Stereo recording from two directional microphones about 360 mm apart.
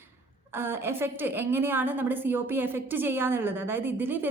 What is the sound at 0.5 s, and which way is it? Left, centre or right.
A woman's voice, centre.